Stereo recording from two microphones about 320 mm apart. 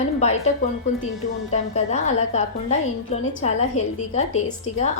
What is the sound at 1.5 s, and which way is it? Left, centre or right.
A woman's voice, left.